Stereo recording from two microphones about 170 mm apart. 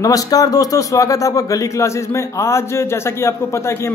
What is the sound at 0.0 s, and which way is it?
A man's voice, 20° left (ahead or behind).